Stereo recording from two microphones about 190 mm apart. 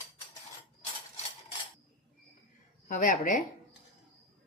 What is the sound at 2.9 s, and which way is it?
Speech, 45° left (ahead or behind).